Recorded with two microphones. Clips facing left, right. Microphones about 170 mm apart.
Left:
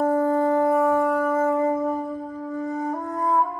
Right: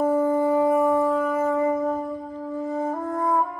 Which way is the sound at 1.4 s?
25° left (ahead or behind).